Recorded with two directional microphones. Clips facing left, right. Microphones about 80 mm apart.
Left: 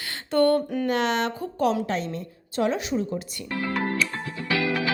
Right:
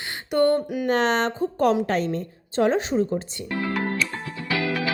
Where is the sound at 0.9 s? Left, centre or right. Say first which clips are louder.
Right 5 dB; right.